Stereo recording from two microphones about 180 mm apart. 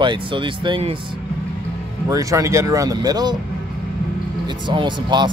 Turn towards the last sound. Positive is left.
turn(degrees=-25)  # may be behind; listen again after turning